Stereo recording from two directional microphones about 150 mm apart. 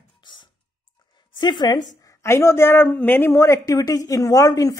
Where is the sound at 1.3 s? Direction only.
30° left (ahead or behind).